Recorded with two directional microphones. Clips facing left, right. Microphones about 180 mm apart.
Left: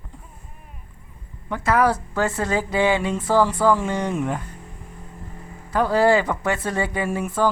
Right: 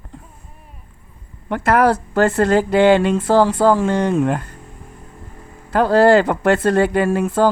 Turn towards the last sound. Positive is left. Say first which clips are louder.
# right 7 dB
turn(degrees=-85)